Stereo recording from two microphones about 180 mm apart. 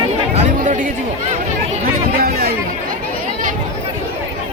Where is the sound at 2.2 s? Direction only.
60° right (ahead or behind).